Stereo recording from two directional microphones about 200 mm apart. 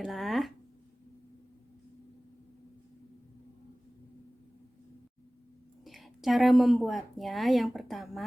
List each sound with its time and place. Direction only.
0.0 s speech: centre (ahead or behind)
5.8 s speech: centre (ahead or behind)